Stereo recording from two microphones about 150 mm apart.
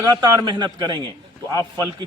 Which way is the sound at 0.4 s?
30° right (ahead or behind).